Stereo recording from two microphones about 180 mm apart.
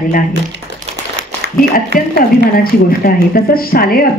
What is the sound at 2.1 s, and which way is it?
A woman's voice, 55° left (ahead or behind).